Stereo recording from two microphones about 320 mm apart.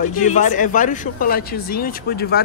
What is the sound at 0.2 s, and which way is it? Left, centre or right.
Speech, left.